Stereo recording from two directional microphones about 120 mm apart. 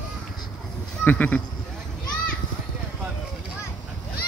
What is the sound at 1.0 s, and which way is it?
Speech, 15° left (ahead or behind).